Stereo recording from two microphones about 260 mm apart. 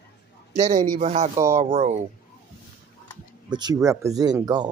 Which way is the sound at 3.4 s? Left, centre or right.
Centre.